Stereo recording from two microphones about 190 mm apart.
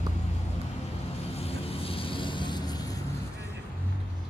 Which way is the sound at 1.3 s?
30° left (ahead or behind).